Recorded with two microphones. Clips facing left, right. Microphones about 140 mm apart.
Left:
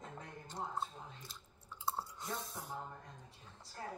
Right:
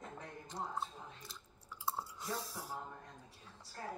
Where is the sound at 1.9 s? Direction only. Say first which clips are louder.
Even; centre (ahead or behind).